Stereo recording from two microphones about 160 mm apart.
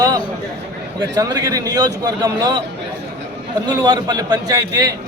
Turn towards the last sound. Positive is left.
turn(degrees=-25)  # may be behind; listen again after turning